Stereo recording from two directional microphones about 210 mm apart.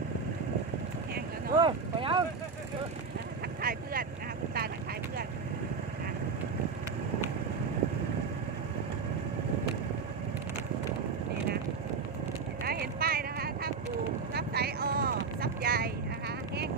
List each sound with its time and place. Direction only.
1.5 s vehicle: 25° right (ahead or behind)
3.6 s vehicle: 45° right (ahead or behind)
12.6 s a sound: 45° right (ahead or behind)
14.3 s vehicle: 50° right (ahead or behind)